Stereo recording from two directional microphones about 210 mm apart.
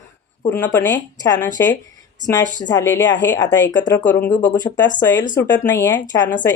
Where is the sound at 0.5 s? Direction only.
10° left (ahead or behind).